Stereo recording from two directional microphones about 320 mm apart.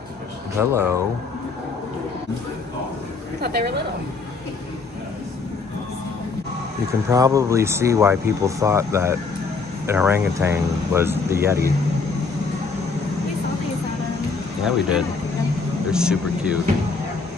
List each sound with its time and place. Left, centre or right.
0.6 s speech: centre
3.3 s a woman's voice: right
6.9 s speech: centre
14.6 s speech: centre